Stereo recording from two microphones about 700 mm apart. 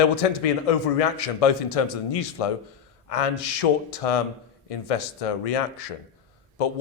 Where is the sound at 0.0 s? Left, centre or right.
Left.